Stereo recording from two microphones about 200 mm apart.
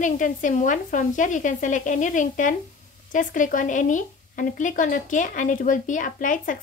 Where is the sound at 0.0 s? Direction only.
40° left (ahead or behind).